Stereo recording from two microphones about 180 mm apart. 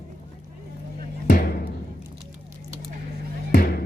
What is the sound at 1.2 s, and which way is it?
Music, 55° left (ahead or behind).